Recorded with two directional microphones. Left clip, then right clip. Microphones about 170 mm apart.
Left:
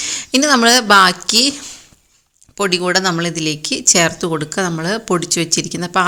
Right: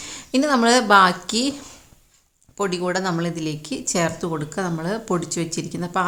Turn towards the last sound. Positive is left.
turn(degrees=20)  # may be behind; listen again after turning